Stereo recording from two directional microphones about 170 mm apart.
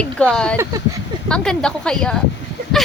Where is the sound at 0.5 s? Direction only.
15° right (ahead or behind).